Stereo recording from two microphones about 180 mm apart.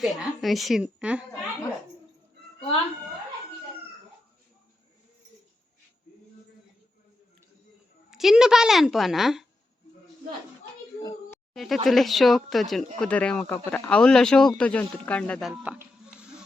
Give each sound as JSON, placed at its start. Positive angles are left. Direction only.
{"t": 0.0, "sound": "speech", "side_deg": 0}
{"t": 8.1, "sound": "speech", "side_deg": 0}
{"t": 11.5, "sound": "speech", "side_deg": 0}